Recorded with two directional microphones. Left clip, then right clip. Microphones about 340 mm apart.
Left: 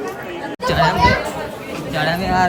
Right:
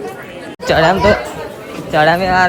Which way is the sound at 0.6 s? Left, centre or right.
Centre.